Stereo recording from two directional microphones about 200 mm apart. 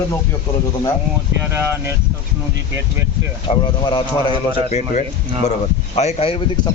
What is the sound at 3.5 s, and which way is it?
Speech, 25° left (ahead or behind).